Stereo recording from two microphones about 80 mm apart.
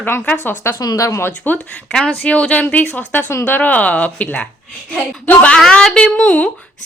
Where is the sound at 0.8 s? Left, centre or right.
Left.